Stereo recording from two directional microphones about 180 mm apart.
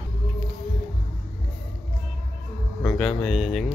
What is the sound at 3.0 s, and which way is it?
Speech, 5° left (ahead or behind).